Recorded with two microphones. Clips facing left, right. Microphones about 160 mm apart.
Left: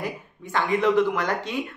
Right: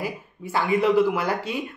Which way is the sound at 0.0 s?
5° right (ahead or behind).